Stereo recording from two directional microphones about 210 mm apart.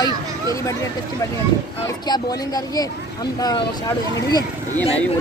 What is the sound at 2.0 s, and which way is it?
Speech, 20° left (ahead or behind).